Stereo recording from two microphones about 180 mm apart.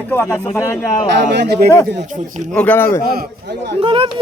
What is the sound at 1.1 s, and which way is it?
Speech, 70° right (ahead or behind).